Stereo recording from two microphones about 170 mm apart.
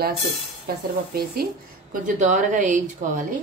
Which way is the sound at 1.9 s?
50° right (ahead or behind).